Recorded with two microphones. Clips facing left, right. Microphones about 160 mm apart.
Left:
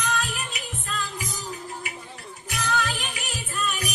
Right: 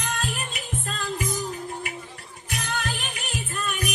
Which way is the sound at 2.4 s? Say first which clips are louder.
Left 3 dB; 50° right (ahead or behind).